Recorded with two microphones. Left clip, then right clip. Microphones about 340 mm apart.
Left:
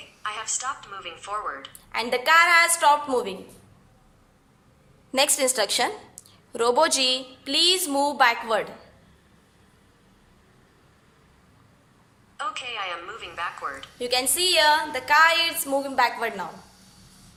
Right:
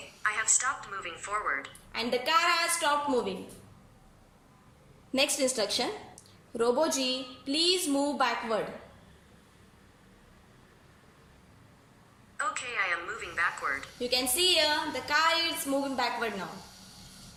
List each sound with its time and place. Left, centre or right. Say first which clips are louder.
0.2 s a woman's voice: right 2 dB; centre
1.9 s a woman's voice: left 7 dB; centre
5.1 s a woman's voice: left 6 dB; centre
12.4 s a woman's voice: left 1 dB; centre
14.0 s a woman's voice: left 4 dB; centre